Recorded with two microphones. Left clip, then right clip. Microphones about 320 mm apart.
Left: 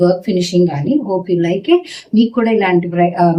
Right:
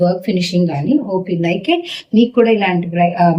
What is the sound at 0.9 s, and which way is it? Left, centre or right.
Speech, centre.